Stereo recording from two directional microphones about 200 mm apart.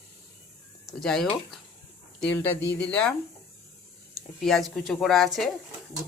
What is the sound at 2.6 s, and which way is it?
Speech, 60° left (ahead or behind).